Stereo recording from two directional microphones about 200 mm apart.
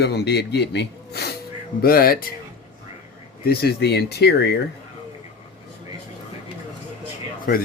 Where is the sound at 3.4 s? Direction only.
50° left (ahead or behind).